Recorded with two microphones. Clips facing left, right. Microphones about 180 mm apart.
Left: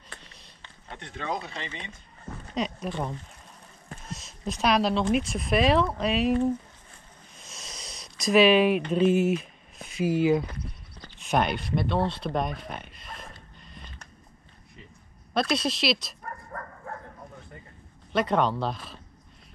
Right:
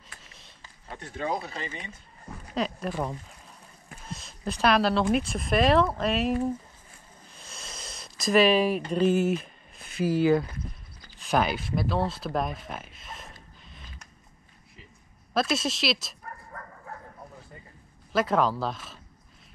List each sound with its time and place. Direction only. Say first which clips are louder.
0.2 s a sound: left 1 dB; centre (ahead or behind)
0.9 s speech: right 2 dB; 35° right (ahead or behind)
2.5 s speech: right 1 dB; centre (ahead or behind)
4.1 s a sound: right 1 dB; centre (ahead or behind)
4.6 s speech: right 1 dB; centre (ahead or behind)
7.3 s a sound: right 1 dB; centre (ahead or behind)
10.2 s speech: right 1 dB; centre (ahead or behind)
15.3 s speech: left 1 dB; centre (ahead or behind)
18.1 s speech: even; centre (ahead or behind)